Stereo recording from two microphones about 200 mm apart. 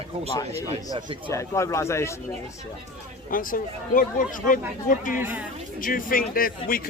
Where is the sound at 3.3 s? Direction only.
45° left (ahead or behind).